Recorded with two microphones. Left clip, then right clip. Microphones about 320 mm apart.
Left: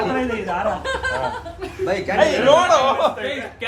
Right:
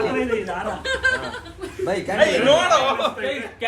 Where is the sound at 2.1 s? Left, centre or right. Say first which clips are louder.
Left 2 dB; left.